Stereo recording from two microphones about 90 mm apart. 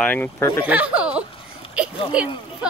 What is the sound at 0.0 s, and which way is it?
Speech, 20° left (ahead or behind).